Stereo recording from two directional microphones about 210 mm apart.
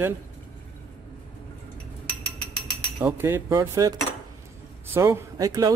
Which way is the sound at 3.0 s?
10° right (ahead or behind).